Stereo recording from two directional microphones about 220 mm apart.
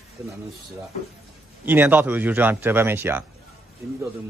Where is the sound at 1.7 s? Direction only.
10° right (ahead or behind).